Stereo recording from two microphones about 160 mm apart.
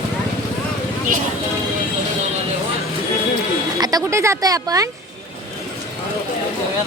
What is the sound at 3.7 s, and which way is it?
Speech, 25° right (ahead or behind).